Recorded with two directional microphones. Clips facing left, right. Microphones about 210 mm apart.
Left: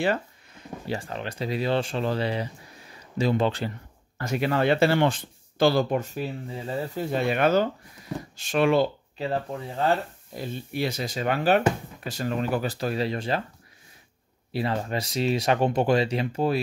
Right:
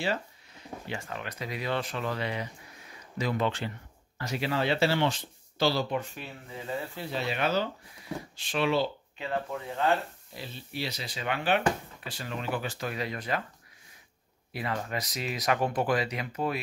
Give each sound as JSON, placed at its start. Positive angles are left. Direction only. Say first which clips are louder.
{"t": 0.0, "sound": "a sound", "louder": "left 6 dB", "side_deg": 55}
{"t": 0.8, "sound": "speech", "louder": "left 7 dB", "side_deg": 35}
{"t": 4.2, "sound": "speech", "louder": "left 6 dB", "side_deg": 50}
{"t": 9.2, "sound": "speech", "louder": "left 4 dB", "side_deg": 35}
{"t": 10.3, "sound": "speech", "louder": "left 8 dB", "side_deg": 50}
{"t": 14.5, "sound": "speech", "louder": "left 6 dB", "side_deg": 30}